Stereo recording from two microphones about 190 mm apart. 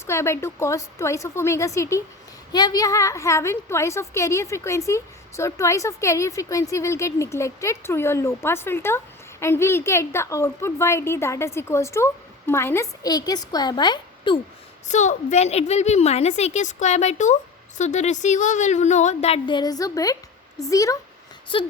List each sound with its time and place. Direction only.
0.0 s a woman's voice: 15° left (ahead or behind)
14.8 s a woman's voice: 40° left (ahead or behind)